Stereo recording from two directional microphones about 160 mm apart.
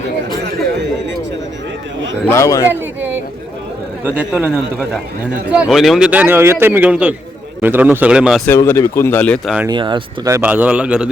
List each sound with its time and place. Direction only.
2.2 s a man's voice: 15° left (ahead or behind)
4.0 s a man's voice: 10° right (ahead or behind)
8.4 s speech: 15° left (ahead or behind)
9.6 s speech: 30° right (ahead or behind)
10.5 s a man's voice: 10° right (ahead or behind)